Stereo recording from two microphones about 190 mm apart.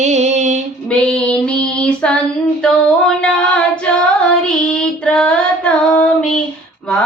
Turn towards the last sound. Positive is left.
turn(degrees=5)  # may be behind; listen again after turning